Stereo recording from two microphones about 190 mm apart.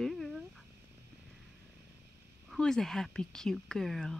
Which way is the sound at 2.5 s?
Centre (ahead or behind).